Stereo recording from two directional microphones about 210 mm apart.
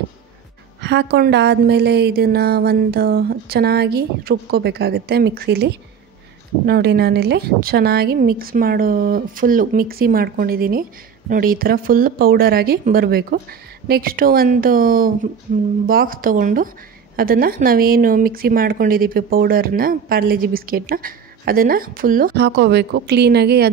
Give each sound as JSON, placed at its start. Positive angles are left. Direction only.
{"t": 0.7, "sound": "speech", "side_deg": -55}